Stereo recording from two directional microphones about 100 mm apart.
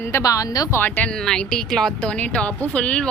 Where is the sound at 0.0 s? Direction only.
30° left (ahead or behind).